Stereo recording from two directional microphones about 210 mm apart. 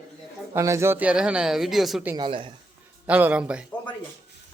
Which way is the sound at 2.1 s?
25° right (ahead or behind).